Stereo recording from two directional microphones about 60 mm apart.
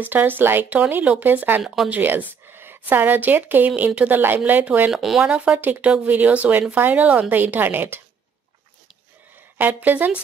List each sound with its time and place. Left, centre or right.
0.0 s a woman's voice: right
1.9 s a sound: right
2.8 s a woman's voice: right
4.9 s speech: centre
5.3 s a woman's voice: right
9.6 s a woman's voice: right